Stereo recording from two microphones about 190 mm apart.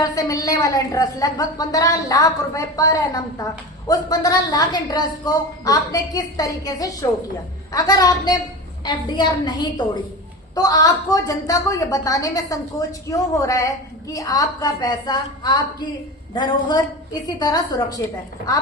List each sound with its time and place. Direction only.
0.0 s a woman's voice: 20° left (ahead or behind)